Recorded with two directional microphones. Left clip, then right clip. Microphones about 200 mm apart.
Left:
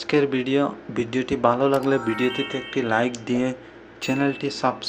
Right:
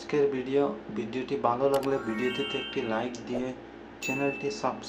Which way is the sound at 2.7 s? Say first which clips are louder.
Left 13 dB; 30° left (ahead or behind).